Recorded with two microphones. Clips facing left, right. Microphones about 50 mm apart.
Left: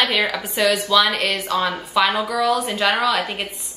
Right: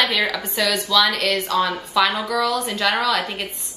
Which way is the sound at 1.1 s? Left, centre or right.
Centre.